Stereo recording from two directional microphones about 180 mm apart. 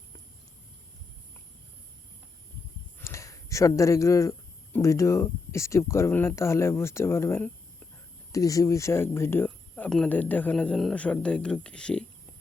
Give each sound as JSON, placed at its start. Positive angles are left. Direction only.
{"t": 3.0, "sound": "speech", "side_deg": 15}